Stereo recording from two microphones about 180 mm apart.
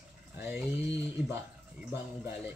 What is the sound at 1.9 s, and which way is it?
Speech, 10° right (ahead or behind).